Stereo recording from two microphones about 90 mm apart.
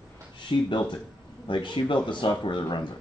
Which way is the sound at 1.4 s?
60° left (ahead or behind).